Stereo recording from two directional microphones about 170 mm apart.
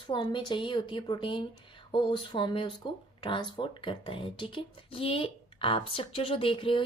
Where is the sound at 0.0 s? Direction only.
30° left (ahead or behind).